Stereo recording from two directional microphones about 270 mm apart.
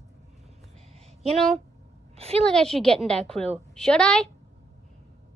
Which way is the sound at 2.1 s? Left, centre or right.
Right.